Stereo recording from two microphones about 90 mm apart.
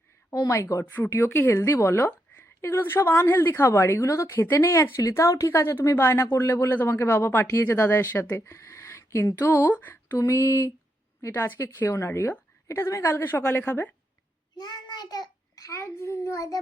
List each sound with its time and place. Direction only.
0.3 s a sound: 35° left (ahead or behind)
0.9 s a woman's voice: 25° left (ahead or behind)
8.4 s speech: 35° left (ahead or behind)
10.2 s a sound: 30° left (ahead or behind)
11.3 s a woman's voice: 25° left (ahead or behind)
14.6 s a child's voice: 50° left (ahead or behind); by 16.6 s 35° left (ahead or behind)